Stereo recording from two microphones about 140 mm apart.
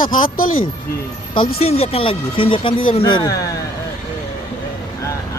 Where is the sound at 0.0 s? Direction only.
80° left.